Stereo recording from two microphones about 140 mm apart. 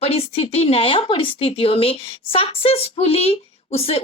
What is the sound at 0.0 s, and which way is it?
A woman's voice, 45° left (ahead or behind).